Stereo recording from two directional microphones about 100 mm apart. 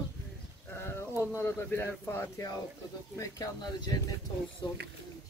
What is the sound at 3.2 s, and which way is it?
Speech, 35° left (ahead or behind).